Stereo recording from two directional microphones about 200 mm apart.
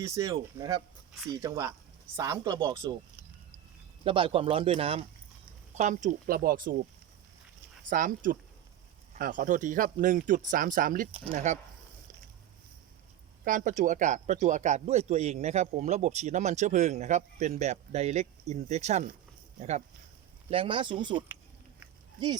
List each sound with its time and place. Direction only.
0.0 s speech: 15° right (ahead or behind)
4.0 s speech: 25° right (ahead or behind); by 6.7 s 45° right (ahead or behind)
7.9 s a man's voice: 40° right (ahead or behind)
11.1 s a man's voice: 30° right (ahead or behind)
13.4 s a man's voice: 40° right (ahead or behind); by 21.2 s 25° right (ahead or behind)